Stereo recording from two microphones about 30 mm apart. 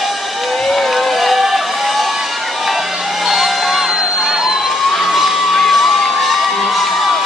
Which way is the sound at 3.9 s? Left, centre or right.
Centre.